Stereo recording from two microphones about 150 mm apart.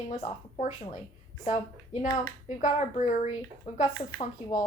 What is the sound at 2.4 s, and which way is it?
Speech, 55° left (ahead or behind).